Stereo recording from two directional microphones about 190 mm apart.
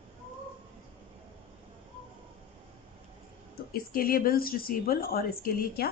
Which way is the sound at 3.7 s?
50° left (ahead or behind).